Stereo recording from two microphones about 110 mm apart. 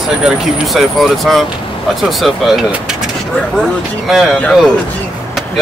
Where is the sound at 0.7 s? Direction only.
Centre (ahead or behind).